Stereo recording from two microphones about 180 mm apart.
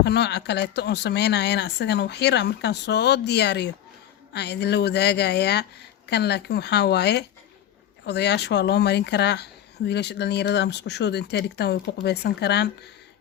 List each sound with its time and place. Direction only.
0.0 s speech: 70° left (ahead or behind)